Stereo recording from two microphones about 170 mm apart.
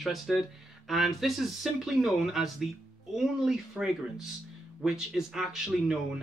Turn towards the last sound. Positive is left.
turn(degrees=0)  # may be behind; listen again after turning